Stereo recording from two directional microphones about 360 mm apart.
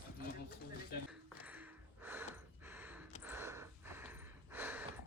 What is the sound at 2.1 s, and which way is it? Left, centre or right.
Gasp, centre.